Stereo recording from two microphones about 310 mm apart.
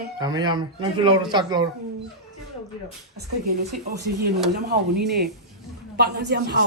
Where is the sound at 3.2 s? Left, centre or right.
Right.